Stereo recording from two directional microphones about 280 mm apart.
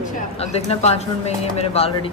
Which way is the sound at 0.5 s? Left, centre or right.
Left.